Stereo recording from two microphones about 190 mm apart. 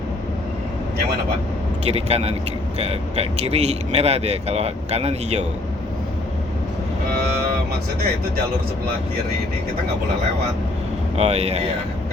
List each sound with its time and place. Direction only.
1.8 s speech: 35° right (ahead or behind)
11.2 s speech: 35° right (ahead or behind)